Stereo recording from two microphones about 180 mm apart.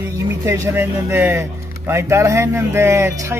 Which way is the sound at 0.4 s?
15° right (ahead or behind).